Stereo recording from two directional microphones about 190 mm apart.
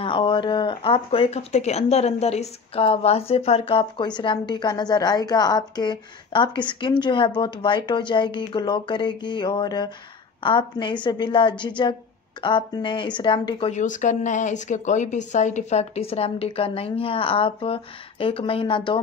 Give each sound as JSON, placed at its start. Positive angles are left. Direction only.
{"t": 0.0, "sound": "speech", "side_deg": 25}